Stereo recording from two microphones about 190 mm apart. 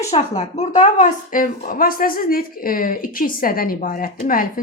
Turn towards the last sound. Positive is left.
turn(degrees=45)  # may be behind; listen again after turning